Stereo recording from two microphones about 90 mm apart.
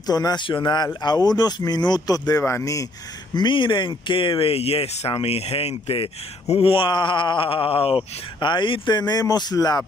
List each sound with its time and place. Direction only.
0.0 s speech: 50° left (ahead or behind)
0.5 s speech: 60° left (ahead or behind)
1.0 s speech: 50° left (ahead or behind)
3.3 s speech: 65° left (ahead or behind)